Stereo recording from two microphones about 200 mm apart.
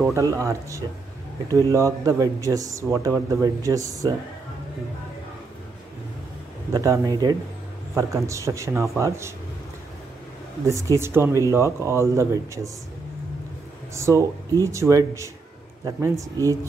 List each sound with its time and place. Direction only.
0.1 s speech: 15° right (ahead or behind)
6.7 s speech: 15° right (ahead or behind)
10.6 s speech: 15° right (ahead or behind)
13.9 s speech: 15° right (ahead or behind)